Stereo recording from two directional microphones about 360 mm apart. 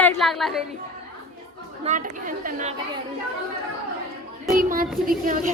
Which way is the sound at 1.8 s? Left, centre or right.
Right.